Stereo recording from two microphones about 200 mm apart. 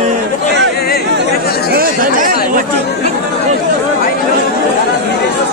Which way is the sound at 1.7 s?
45° right (ahead or behind).